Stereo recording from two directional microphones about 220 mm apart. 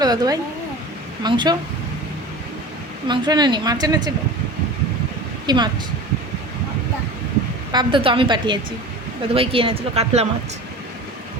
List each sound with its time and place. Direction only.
0.0 s speech: 15° right (ahead or behind)
3.1 s speech: 20° right (ahead or behind)
5.5 s speech: 20° right (ahead or behind)
7.7 s speech: 20° right (ahead or behind)